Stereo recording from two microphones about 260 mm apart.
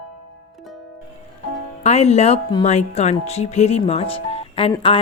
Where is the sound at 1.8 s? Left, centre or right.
Left.